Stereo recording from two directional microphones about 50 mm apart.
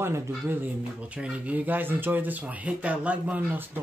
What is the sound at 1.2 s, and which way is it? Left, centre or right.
Speech, right.